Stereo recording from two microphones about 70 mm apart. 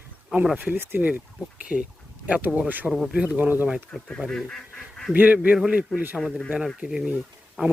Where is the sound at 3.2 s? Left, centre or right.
Right.